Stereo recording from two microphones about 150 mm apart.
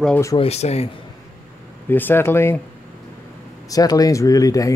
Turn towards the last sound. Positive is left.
turn(degrees=25)  # may be behind; listen again after turning